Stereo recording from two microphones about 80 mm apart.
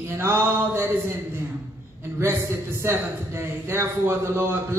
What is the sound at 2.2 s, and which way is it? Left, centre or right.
A man's voice, right.